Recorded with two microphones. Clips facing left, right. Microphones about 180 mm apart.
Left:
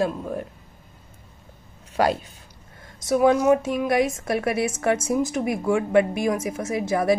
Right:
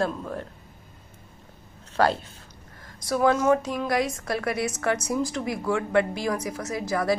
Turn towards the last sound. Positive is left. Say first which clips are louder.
# left 4 dB
turn(degrees=25)  # may be behind; listen again after turning